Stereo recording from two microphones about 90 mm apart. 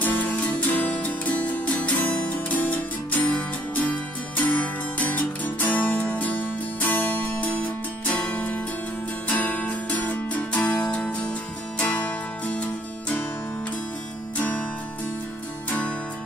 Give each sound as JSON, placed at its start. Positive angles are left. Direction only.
{"t": 0.0, "sound": "music", "side_deg": 20}